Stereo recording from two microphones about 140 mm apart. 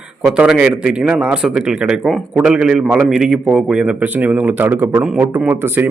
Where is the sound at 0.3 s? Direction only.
5° right (ahead or behind).